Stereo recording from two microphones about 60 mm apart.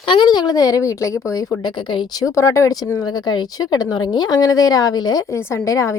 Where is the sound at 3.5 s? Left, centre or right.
Left.